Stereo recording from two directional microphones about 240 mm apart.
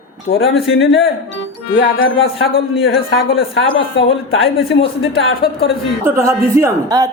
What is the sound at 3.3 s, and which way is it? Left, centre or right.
Speech, left.